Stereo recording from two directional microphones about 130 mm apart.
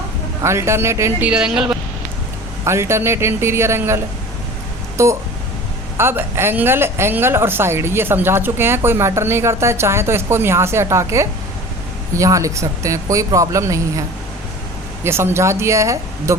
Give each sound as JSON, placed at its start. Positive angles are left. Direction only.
{"t": 0.4, "sound": "speech", "side_deg": -20}
{"t": 1.3, "sound": "speech", "side_deg": -5}
{"t": 2.6, "sound": "speech", "side_deg": -20}
{"t": 15.0, "sound": "speech", "side_deg": -20}